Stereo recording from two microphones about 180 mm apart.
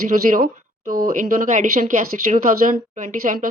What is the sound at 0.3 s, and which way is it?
Speech, 50° right (ahead or behind).